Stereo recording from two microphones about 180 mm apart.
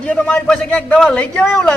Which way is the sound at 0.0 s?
10° left (ahead or behind).